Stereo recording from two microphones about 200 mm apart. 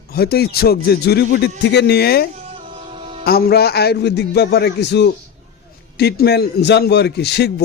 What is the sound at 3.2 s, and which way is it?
A man's voice, 50° left (ahead or behind).